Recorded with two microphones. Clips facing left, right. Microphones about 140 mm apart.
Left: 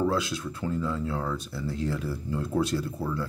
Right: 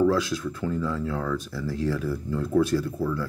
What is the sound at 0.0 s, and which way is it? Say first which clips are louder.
Speech: right 5 dB; 25° left (ahead or behind).